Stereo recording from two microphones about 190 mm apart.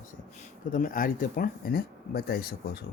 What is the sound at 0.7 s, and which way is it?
Speech, 45° left (ahead or behind).